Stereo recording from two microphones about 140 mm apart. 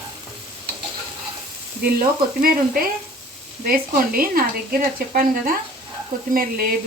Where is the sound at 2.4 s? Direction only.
90° right.